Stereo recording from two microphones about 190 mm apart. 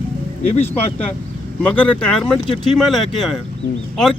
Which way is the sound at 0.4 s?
35° left (ahead or behind).